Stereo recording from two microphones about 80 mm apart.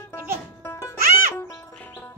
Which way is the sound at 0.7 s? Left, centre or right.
Left.